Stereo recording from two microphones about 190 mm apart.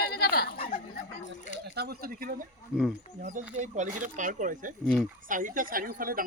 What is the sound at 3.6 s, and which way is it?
Speech, 40° right (ahead or behind).